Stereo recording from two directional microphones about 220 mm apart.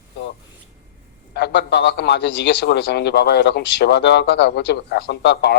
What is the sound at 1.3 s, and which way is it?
A man's voice, 50° left (ahead or behind).